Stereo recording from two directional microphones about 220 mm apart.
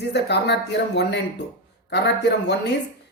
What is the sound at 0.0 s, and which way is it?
A man's voice, 50° left (ahead or behind).